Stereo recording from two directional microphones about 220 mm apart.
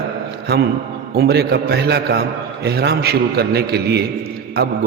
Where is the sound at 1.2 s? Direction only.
45° right (ahead or behind).